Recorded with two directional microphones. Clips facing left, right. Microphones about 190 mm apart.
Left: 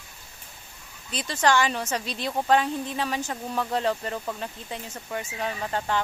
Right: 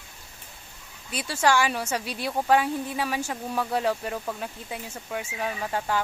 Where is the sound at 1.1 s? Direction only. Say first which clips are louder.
Even; 10° right (ahead or behind).